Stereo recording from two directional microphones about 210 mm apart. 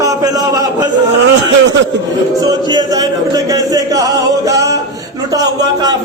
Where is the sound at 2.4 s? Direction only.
20° right (ahead or behind).